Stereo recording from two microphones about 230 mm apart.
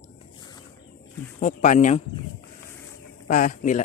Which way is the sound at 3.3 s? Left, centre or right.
Left.